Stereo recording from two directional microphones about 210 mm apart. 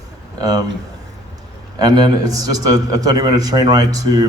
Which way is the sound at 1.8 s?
20° right (ahead or behind).